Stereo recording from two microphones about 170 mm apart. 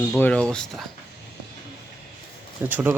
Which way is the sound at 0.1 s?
5° left (ahead or behind).